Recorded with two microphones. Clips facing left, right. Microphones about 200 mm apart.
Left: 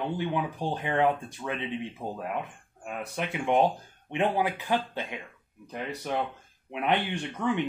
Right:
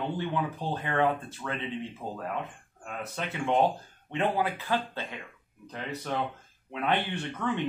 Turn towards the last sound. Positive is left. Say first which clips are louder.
# left 2 dB
turn(degrees=15)  # may be behind; listen again after turning